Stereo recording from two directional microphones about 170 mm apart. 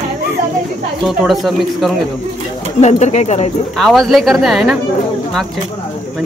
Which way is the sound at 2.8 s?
40° left (ahead or behind).